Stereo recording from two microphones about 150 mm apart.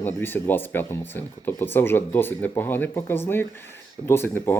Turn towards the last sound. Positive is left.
turn(degrees=15)  # may be behind; listen again after turning